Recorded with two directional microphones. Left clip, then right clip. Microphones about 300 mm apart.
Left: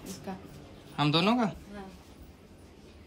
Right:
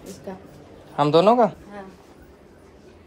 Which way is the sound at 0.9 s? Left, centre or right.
Centre.